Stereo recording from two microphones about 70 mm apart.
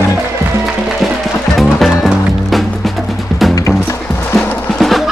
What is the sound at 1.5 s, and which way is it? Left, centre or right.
Music, centre.